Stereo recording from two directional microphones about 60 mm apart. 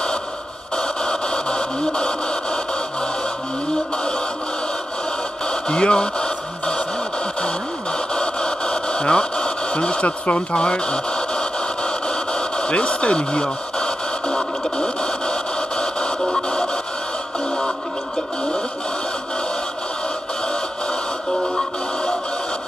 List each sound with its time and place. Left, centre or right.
0.7 s radio: centre
5.5 s radio: centre